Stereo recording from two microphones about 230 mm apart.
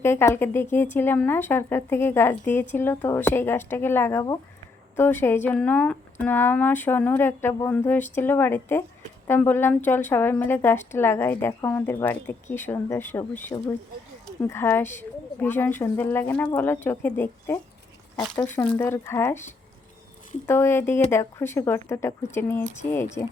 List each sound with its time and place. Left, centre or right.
0.0 s speech: centre
20.5 s speech: centre